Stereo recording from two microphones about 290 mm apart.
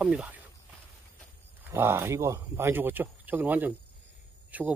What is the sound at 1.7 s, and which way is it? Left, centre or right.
Speech, centre.